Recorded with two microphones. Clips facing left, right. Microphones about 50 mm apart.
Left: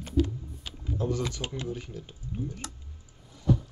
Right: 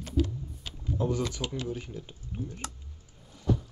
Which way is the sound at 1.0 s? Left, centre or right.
Centre.